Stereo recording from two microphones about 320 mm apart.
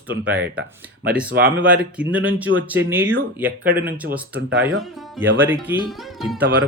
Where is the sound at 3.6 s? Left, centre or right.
Right.